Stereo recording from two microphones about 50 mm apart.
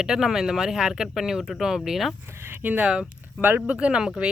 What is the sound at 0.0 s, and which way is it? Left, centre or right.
Speech, centre.